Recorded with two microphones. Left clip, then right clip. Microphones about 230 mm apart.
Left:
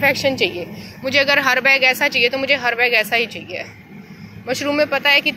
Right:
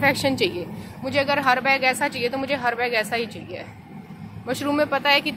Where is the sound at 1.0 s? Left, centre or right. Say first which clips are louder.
Left 6 dB; centre.